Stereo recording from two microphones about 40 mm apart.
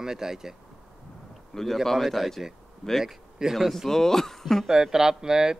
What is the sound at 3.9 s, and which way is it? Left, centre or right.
Speech, centre.